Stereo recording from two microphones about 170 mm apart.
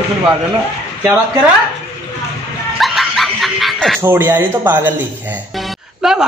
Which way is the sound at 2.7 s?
Centre (ahead or behind).